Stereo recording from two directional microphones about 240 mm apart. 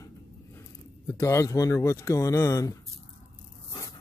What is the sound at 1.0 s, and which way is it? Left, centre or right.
Speech, centre.